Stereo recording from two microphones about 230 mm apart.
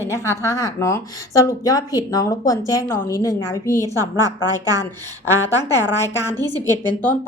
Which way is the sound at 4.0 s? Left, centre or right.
Centre.